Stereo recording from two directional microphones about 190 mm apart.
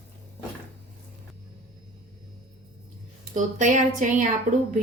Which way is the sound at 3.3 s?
40° right (ahead or behind).